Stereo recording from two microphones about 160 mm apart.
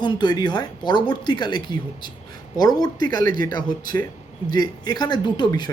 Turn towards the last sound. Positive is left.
turn(degrees=25)  # may be behind; listen again after turning